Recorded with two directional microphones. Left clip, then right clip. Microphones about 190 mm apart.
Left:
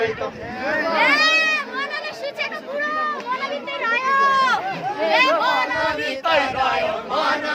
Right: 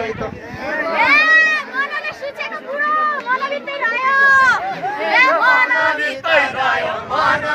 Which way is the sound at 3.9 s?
Centre (ahead or behind).